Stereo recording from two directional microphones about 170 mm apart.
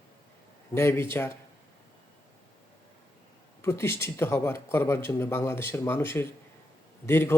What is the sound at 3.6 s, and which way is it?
Speech, 15° left (ahead or behind).